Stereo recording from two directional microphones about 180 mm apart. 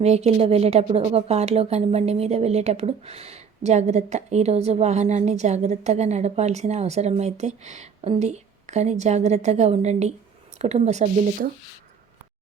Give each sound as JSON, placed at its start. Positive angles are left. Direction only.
{"t": 0.0, "sound": "a woman's voice", "side_deg": -35}